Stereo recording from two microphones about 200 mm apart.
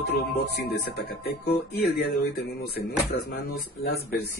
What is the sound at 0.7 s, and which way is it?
Speech, 50° left (ahead or behind).